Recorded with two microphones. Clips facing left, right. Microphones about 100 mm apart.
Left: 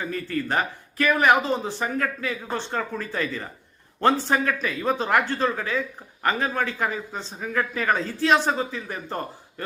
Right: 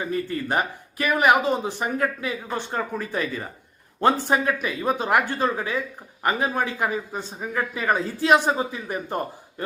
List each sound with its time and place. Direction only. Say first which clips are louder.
0.0 s a man's voice: right 1 dB; 20° right (ahead or behind)